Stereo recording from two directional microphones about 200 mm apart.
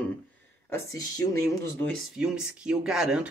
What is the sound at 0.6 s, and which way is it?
Speech, 15° left (ahead or behind).